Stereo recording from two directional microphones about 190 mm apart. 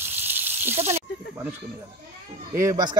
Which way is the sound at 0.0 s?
10° right (ahead or behind).